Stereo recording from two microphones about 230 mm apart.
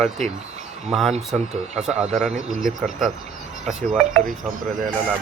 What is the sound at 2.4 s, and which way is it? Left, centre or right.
Speech, right.